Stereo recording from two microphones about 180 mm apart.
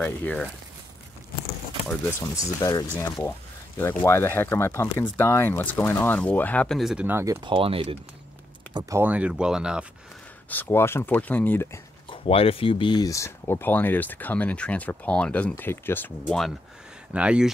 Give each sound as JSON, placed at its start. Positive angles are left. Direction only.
{"t": 0.0, "sound": "speech", "side_deg": 10}
{"t": 2.3, "sound": "speech", "side_deg": 20}
{"t": 7.4, "sound": "speech", "side_deg": -30}
{"t": 8.7, "sound": "speech", "side_deg": -15}
{"t": 10.5, "sound": "speech", "side_deg": 10}
{"t": 12.1, "sound": "speech", "side_deg": 30}